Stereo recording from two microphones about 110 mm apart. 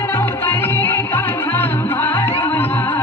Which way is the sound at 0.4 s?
20° left (ahead or behind).